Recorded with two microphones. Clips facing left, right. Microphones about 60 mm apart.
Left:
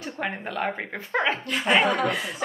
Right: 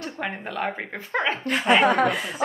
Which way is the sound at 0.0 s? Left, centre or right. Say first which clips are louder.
Even; centre.